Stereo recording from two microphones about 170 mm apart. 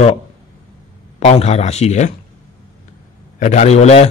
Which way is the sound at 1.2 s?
40° left (ahead or behind).